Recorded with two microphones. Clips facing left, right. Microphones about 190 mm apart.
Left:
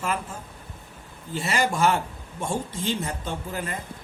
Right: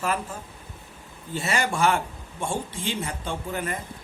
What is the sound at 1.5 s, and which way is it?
Speech, 35° left (ahead or behind).